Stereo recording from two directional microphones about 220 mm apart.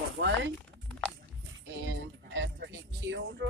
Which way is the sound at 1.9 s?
55° right (ahead or behind).